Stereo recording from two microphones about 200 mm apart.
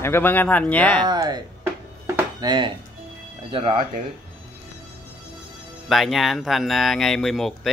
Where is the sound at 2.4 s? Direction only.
25° right (ahead or behind).